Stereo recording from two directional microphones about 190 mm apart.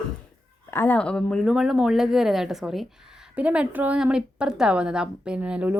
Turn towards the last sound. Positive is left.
turn(degrees=-5)  # may be behind; listen again after turning